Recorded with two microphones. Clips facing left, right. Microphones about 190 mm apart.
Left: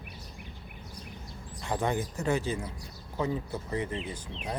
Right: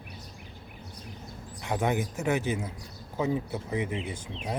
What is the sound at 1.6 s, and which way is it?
Speech, 15° right (ahead or behind).